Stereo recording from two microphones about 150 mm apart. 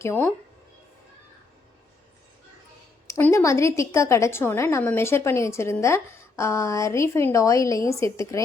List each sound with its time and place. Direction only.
0.0 s speech: 15° left (ahead or behind)
3.1 s a woman's voice: 15° left (ahead or behind)